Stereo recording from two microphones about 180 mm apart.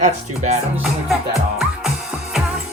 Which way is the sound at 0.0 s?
40° right (ahead or behind).